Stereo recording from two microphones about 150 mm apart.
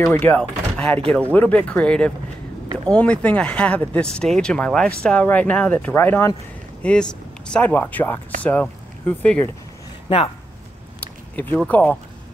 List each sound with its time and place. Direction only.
0.0 s speech: 15° left (ahead or behind)
10.0 s speech: 35° left (ahead or behind)
11.3 s speech: 10° left (ahead or behind)